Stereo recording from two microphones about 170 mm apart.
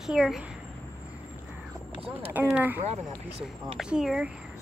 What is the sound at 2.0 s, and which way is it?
Speech, 35° right (ahead or behind).